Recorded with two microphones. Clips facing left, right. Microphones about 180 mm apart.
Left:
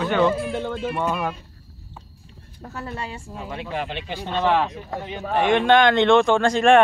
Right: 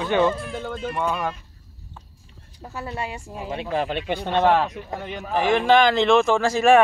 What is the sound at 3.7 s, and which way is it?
Speech, 40° right (ahead or behind).